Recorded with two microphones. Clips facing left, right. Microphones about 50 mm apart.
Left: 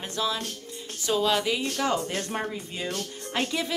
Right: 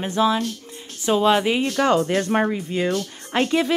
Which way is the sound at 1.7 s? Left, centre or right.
Right.